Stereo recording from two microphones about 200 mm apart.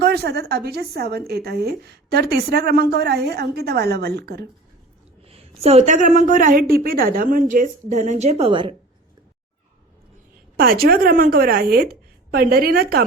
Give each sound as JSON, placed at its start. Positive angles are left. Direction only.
{"t": 0.0, "sound": "a woman's voice", "side_deg": -55}
{"t": 5.2, "sound": "a woman's voice", "side_deg": -30}
{"t": 10.6, "sound": "a woman's voice", "side_deg": -50}